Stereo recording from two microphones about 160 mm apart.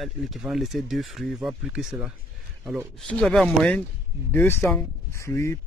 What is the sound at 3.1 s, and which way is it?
Speech, 5° left (ahead or behind).